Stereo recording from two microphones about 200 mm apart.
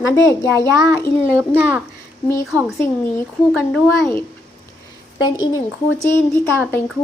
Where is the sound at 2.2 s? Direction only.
15° left (ahead or behind).